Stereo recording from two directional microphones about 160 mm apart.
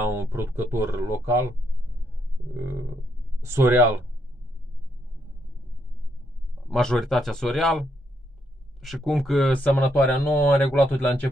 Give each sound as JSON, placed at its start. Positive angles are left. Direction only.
{"t": 0.0, "sound": "speech", "side_deg": -15}
{"t": 3.3, "sound": "speech", "side_deg": -15}
{"t": 6.7, "sound": "speech", "side_deg": 5}
{"t": 8.8, "sound": "speech", "side_deg": 0}